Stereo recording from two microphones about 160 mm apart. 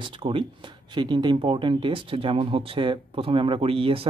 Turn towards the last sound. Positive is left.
turn(degrees=-35)  # may be behind; listen again after turning